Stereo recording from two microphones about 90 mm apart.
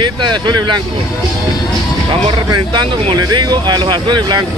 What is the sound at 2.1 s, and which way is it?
Speech, 55° right (ahead or behind).